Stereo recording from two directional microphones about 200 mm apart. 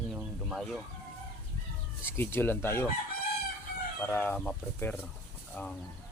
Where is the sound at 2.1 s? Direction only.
10° left (ahead or behind).